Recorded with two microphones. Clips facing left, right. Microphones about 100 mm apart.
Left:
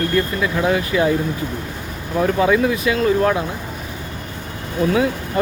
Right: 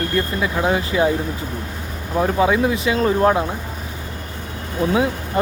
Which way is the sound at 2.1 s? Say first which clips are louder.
Left 1 dB; 15° right (ahead or behind).